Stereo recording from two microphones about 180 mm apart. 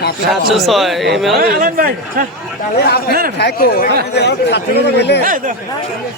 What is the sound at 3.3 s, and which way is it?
Speech, 60° left (ahead or behind).